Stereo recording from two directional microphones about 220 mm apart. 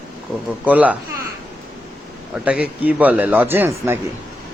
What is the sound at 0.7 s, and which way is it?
Speech, 5° right (ahead or behind).